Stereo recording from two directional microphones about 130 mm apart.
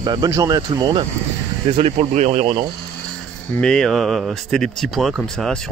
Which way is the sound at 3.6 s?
5° left (ahead or behind).